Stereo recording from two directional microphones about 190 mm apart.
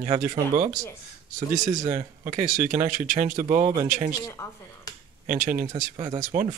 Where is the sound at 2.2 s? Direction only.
45° right (ahead or behind).